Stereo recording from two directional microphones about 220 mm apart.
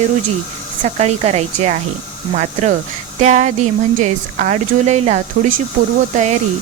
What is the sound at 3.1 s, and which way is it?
Speech, 30° right (ahead or behind).